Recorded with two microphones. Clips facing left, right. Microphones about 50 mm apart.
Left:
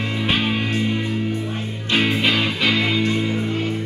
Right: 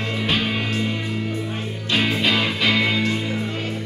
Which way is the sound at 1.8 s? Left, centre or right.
Centre.